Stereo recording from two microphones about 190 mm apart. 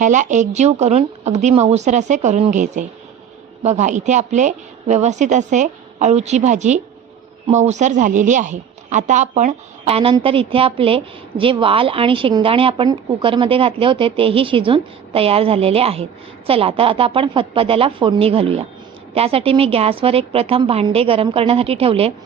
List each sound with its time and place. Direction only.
0.0 s a woman's voice: 40° right (ahead or behind)